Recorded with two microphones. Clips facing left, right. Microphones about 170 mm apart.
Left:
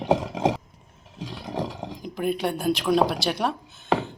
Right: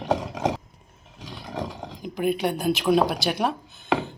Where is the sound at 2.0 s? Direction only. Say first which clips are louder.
Right 2 dB; centre (ahead or behind).